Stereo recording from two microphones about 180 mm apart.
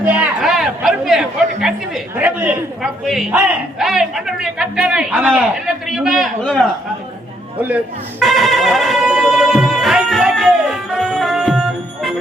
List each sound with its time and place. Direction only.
0.0 s a woman's voice: 5° right (ahead or behind)
8.2 s music: centre (ahead or behind)